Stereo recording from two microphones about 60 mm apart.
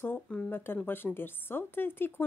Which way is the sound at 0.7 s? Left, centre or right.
Left.